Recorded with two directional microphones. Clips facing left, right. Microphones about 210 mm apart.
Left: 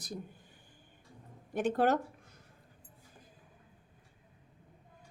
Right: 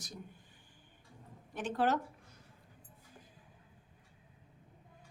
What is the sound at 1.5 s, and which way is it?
Speech, 50° left (ahead or behind).